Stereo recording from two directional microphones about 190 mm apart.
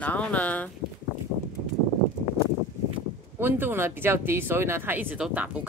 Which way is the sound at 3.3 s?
10° right (ahead or behind).